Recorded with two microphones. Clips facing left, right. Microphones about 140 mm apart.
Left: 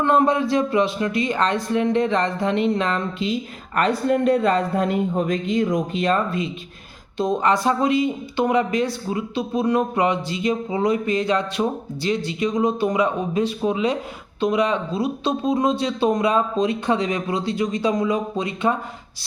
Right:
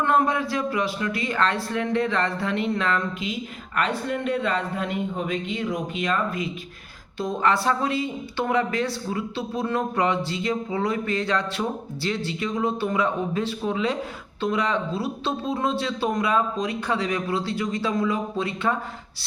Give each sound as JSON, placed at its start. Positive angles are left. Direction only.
{"t": 0.0, "sound": "speech", "side_deg": 20}
{"t": 3.8, "sound": "a man's voice", "side_deg": 40}
{"t": 7.2, "sound": "speech", "side_deg": 20}